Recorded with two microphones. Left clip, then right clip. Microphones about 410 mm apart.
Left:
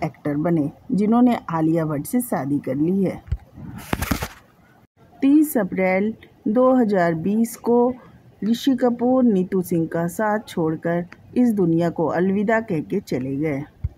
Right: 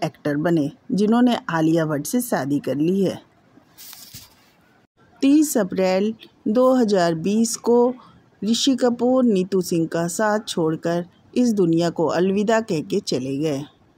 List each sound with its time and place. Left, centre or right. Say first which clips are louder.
0.0 s speech: right 1 dB; left
5.2 s speech: even; left